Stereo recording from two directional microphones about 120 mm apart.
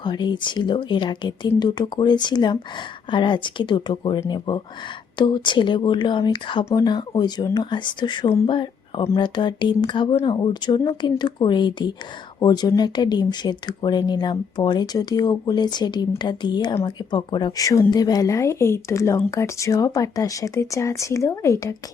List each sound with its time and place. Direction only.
0.0 s speech: 40° left (ahead or behind)